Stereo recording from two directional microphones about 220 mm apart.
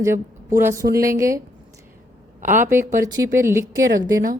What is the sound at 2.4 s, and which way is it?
Speech, 35° right (ahead or behind).